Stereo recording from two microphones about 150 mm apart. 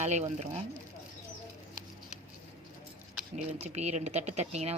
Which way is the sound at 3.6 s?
50° right (ahead or behind).